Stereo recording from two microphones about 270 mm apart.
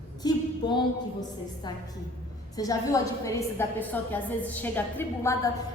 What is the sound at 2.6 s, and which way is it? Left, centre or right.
A woman's voice, centre.